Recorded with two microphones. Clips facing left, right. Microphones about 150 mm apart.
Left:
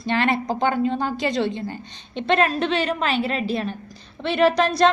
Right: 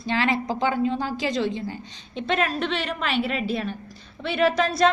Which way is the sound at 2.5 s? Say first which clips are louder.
Left 4 dB; 40° left (ahead or behind).